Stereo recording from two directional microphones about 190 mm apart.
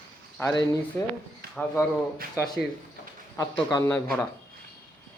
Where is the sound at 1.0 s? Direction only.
15° left (ahead or behind).